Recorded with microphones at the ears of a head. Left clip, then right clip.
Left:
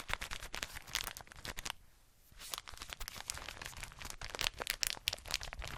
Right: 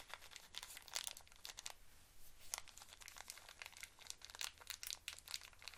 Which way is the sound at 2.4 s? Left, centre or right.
Left.